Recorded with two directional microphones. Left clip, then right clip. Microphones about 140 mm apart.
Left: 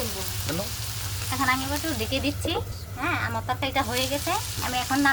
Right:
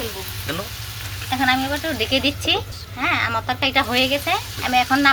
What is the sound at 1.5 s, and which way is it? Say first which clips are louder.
Speech: right 6 dB; 25° right (ahead or behind).